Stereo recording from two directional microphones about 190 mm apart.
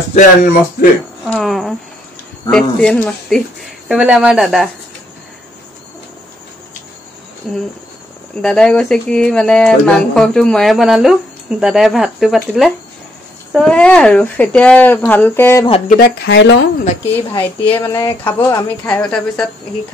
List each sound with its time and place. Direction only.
0.1 s speech: 40° left (ahead or behind)
1.2 s speech: centre (ahead or behind)
8.4 s speech: 5° left (ahead or behind)
16.3 s speech: 70° left (ahead or behind)
17.3 s speech: 10° left (ahead or behind)